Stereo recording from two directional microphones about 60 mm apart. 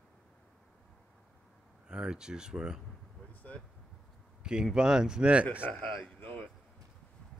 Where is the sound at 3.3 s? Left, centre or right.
Left.